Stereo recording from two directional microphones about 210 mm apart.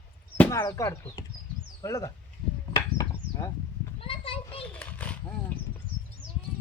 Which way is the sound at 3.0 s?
15° left (ahead or behind).